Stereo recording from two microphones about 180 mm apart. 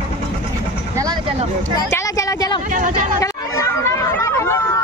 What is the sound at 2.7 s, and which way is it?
Speech, 45° right (ahead or behind).